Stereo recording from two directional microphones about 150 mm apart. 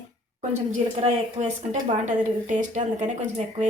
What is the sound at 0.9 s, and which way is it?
Speech, 50° right (ahead or behind).